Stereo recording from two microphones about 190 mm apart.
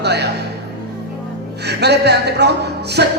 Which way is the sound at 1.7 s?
60° right (ahead or behind).